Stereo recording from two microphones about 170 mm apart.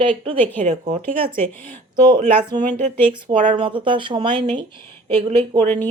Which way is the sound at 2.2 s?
10° left (ahead or behind).